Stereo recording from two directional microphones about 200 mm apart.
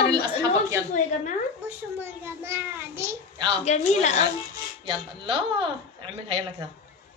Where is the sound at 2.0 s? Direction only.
10° right (ahead or behind).